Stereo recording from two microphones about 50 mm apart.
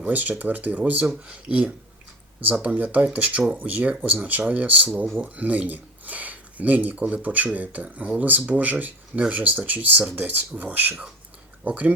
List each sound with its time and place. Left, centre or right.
0.0 s speech: right